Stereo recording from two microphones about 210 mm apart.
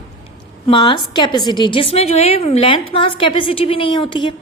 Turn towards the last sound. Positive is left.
turn(degrees=20)  # may be behind; listen again after turning